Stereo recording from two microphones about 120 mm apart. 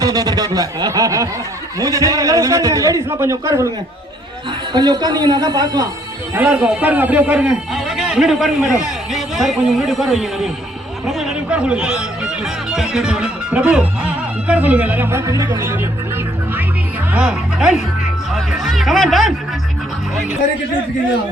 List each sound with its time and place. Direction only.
0.0 s a man's voice: 30° right (ahead or behind)
4.7 s a woman's voice: 35° right (ahead or behind)
6.3 s a man's voice: 10° right (ahead or behind)
11.0 s music: 5° right (ahead or behind); by 15.4 s 25° right (ahead or behind)
15.5 s a man's voice: 20° right (ahead or behind)
17.1 s music: 5° right (ahead or behind)
18.3 s a man's voice: centre (ahead or behind)